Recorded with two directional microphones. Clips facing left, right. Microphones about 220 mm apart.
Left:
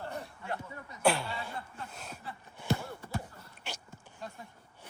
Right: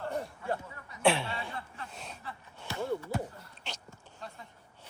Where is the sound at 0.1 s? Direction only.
45° right (ahead or behind).